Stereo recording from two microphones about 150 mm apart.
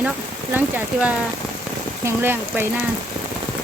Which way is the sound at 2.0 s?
15° right (ahead or behind).